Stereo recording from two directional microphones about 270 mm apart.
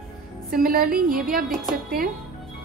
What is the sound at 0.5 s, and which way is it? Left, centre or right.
Speech, right.